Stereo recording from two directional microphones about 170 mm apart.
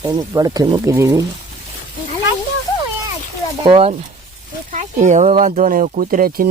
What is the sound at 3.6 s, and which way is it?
Speech, 35° right (ahead or behind).